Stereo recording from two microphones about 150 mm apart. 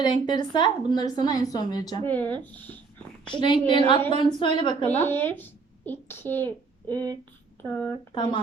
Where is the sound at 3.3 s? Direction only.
35° left (ahead or behind).